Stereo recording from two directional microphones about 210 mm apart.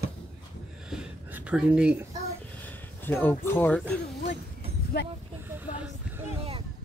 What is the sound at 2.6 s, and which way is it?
Speech, 10° left (ahead or behind).